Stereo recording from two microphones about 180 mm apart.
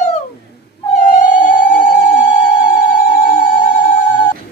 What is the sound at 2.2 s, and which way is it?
Telephone bell ringing, 45° left (ahead or behind).